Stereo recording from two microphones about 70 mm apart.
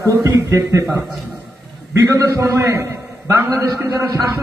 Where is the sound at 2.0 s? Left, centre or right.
Right.